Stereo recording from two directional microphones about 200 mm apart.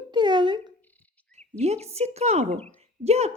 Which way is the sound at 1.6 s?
30° right (ahead or behind).